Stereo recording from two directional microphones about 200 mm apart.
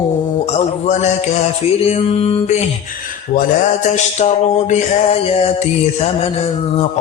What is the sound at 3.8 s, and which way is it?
Mantra, 35° left (ahead or behind).